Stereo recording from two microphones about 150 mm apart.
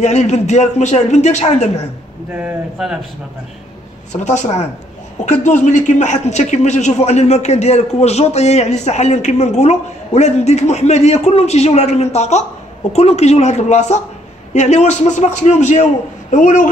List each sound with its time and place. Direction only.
0.0 s a man's voice: 50° left (ahead or behind)
2.3 s speech: 5° right (ahead or behind)
4.2 s a man's voice: 50° left (ahead or behind)